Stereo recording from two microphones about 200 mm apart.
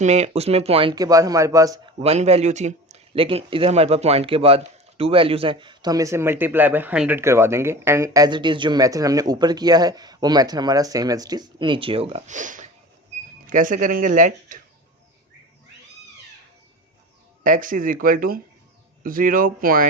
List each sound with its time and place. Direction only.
0.0 s a man's voice: 35° right (ahead or behind); by 2.0 s 15° right (ahead or behind)
2.0 s a man's voice: 30° right (ahead or behind)
17.4 s speech: 40° right (ahead or behind)